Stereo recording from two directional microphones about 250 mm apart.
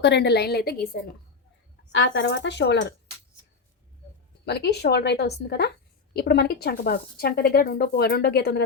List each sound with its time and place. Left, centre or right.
0.0 s speech: left
1.9 s speech: left
4.4 s speech: left